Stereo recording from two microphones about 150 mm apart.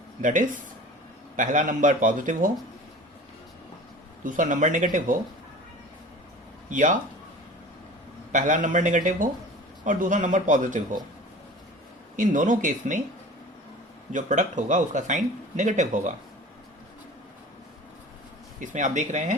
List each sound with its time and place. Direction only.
0.2 s speech: 60° right (ahead or behind)
4.2 s speech: 60° right (ahead or behind)
6.7 s speech: 60° right (ahead or behind)
8.3 s speech: 60° right (ahead or behind)
12.1 s speech: 60° right (ahead or behind)
14.1 s speech: 55° right (ahead or behind)
18.6 s speech: 55° right (ahead or behind)